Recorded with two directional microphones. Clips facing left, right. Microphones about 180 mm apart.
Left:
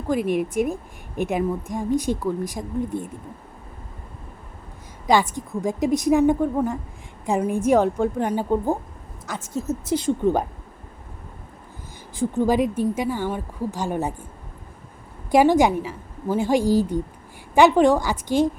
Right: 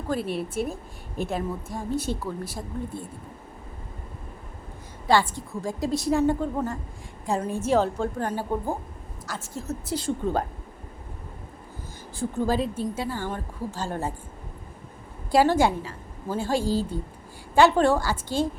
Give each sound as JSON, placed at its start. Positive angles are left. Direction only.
{"t": 0.1, "sound": "a woman's voice", "side_deg": 15}
{"t": 5.0, "sound": "a woman's voice", "side_deg": 15}
{"t": 12.1, "sound": "a woman's voice", "side_deg": 15}
{"t": 15.3, "sound": "a woman's voice", "side_deg": 15}